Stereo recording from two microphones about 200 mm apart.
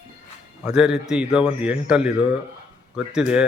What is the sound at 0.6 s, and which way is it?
A man's voice, 5° right (ahead or behind).